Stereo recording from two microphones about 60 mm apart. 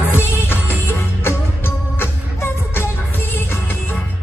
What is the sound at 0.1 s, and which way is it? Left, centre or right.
Music, left.